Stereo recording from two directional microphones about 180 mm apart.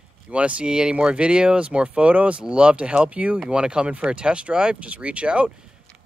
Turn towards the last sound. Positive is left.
turn(degrees=-5)  # may be behind; listen again after turning